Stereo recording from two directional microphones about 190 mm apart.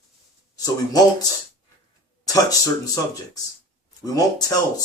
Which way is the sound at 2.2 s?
20° left (ahead or behind).